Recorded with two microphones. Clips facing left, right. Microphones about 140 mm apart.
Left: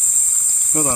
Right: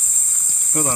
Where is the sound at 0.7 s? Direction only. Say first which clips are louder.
Left 1 dB; 25° left (ahead or behind).